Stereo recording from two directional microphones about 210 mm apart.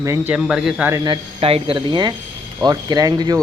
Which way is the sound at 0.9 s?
25° right (ahead or behind).